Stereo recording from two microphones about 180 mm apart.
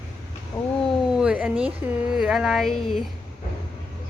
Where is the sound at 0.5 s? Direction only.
20° left (ahead or behind).